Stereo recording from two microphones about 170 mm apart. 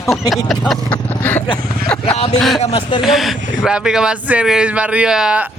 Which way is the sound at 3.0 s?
Centre (ahead or behind).